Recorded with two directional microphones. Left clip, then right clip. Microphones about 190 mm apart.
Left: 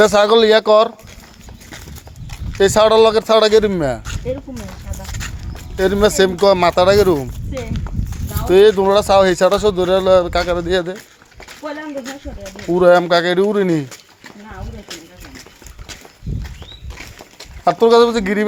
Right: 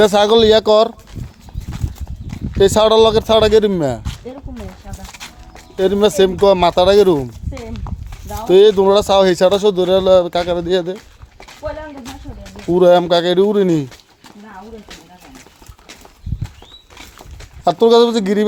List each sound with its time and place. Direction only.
0.0 s speech: 40° right (ahead or behind)
2.6 s speech: 35° right (ahead or behind)
5.7 s speech: 25° right (ahead or behind)
8.4 s speech: 45° right (ahead or behind)
12.7 s speech: 40° right (ahead or behind)
17.7 s speech: 50° right (ahead or behind)